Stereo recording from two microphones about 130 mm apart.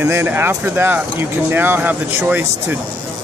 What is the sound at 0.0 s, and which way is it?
Speech, 15° right (ahead or behind).